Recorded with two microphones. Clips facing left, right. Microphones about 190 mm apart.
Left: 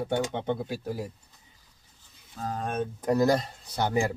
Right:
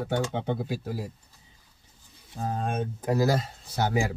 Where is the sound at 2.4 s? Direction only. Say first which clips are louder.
Right 2 dB; 25° right (ahead or behind).